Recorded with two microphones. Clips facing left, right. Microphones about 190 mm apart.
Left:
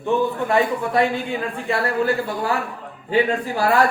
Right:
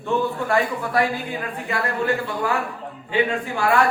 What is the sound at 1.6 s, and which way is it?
Speech, 30° left (ahead or behind).